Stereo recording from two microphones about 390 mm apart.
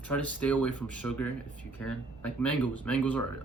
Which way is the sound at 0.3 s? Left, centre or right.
Centre.